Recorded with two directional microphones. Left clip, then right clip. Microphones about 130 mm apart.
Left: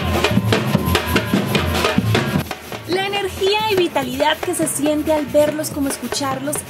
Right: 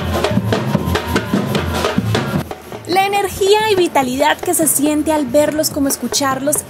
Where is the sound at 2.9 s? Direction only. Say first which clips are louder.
Right 6 dB; 55° right (ahead or behind).